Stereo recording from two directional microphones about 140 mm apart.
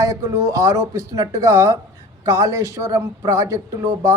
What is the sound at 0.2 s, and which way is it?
Speech, 25° right (ahead or behind).